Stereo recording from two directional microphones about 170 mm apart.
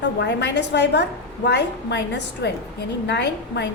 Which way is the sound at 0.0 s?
90° left.